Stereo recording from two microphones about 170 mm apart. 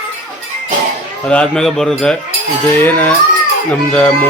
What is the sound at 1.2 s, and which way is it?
Speech, 5° left (ahead or behind).